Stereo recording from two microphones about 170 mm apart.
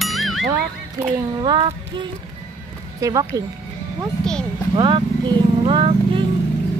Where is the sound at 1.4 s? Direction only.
30° right (ahead or behind).